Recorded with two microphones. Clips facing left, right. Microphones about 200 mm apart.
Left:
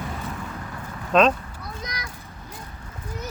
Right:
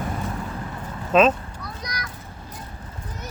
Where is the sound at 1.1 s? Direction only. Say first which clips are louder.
Right 1 dB; centre (ahead or behind).